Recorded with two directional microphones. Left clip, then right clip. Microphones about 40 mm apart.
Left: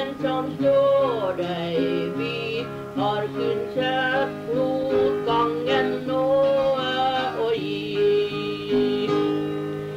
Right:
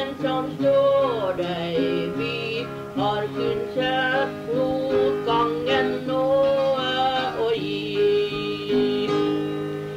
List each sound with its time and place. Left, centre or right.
0.2 s music: left